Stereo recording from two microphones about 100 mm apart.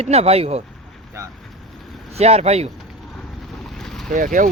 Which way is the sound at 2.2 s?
90° right.